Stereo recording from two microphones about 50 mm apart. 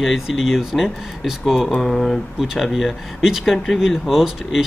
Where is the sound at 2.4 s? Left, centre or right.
Centre.